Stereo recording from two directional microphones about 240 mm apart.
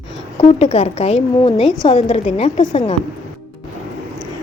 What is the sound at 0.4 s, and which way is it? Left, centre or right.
Speech, left.